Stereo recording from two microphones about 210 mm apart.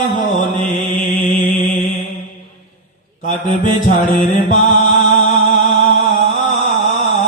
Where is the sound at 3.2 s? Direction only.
40° left (ahead or behind).